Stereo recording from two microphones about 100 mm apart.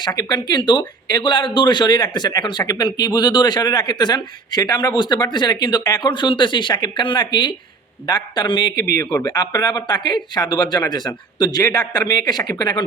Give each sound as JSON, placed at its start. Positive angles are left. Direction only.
{"t": 0.0, "sound": "speech", "side_deg": 45}
{"t": 9.0, "sound": "speech", "side_deg": 35}